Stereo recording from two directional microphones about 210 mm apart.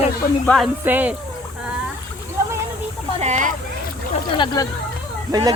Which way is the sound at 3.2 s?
35° right (ahead or behind).